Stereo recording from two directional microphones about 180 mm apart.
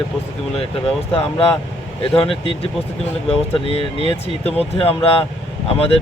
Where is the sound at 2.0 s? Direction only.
30° left (ahead or behind).